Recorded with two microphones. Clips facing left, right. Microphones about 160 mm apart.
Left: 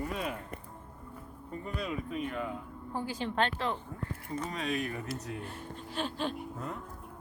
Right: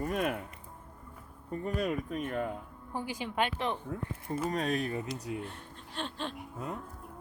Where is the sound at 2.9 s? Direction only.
15° right (ahead or behind).